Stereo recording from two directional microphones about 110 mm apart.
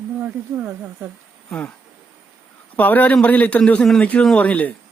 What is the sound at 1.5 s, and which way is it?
Speech, 5° left (ahead or behind).